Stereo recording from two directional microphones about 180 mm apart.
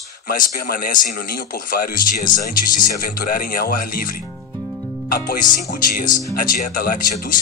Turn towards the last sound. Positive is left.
turn(degrees=50)  # may be behind; listen again after turning